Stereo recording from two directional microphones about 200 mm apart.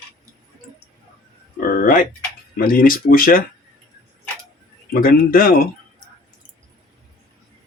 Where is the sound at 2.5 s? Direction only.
45° left (ahead or behind).